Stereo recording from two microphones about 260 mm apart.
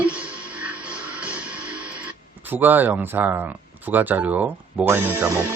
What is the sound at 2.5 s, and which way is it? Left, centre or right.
Speech, centre.